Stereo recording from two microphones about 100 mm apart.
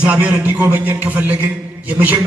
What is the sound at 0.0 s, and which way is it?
A man's voice, 15° right (ahead or behind).